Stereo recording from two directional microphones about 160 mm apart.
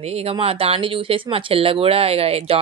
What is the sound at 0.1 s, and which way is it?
Speech, 35° right (ahead or behind).